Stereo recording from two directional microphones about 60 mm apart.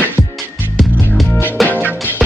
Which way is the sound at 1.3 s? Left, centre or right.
Left.